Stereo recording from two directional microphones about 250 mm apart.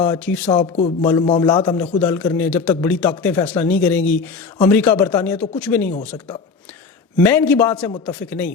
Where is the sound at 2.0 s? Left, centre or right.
Centre.